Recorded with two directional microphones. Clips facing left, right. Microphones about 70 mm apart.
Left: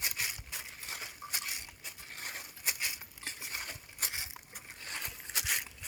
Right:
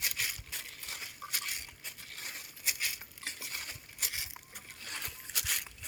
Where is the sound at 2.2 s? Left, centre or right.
Left.